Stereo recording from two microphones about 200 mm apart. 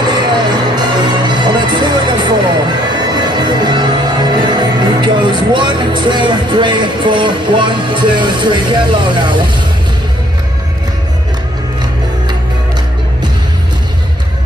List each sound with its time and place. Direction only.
0.0 s music: 20° right (ahead or behind)